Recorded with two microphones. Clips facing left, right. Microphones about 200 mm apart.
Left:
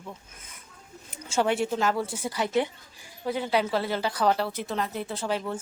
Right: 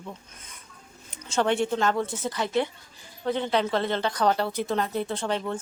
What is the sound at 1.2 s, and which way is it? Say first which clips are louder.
A woman's voice: right 1 dB; 10° left (ahead or behind).